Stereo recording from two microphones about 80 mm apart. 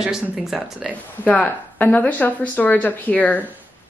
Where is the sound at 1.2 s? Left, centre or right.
Centre.